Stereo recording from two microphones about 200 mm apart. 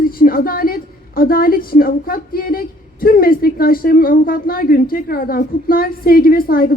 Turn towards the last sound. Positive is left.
turn(degrees=45)  # may be behind; listen again after turning